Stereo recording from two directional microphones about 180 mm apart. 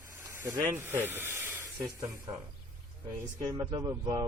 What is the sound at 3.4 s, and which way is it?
Speech, 20° right (ahead or behind).